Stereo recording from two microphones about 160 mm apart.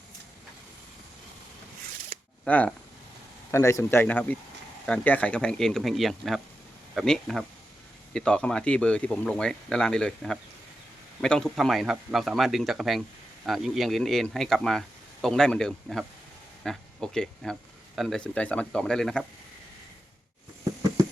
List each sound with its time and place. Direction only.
2.4 s speech: 5° left (ahead or behind)
3.5 s speech: 20° left (ahead or behind)